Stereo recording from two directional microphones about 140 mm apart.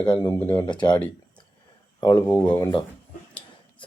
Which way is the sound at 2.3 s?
10° left (ahead or behind).